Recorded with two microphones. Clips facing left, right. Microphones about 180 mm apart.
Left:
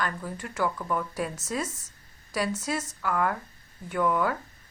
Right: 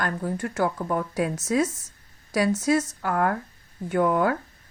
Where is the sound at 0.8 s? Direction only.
35° right (ahead or behind).